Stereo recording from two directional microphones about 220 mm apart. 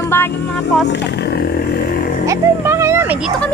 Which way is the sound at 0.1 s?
10° left (ahead or behind).